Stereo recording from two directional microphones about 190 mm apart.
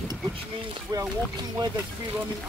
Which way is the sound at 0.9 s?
20° right (ahead or behind).